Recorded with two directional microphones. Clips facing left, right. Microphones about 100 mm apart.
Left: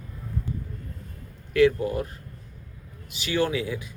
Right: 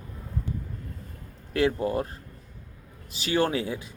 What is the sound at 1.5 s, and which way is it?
Speech, 30° right (ahead or behind).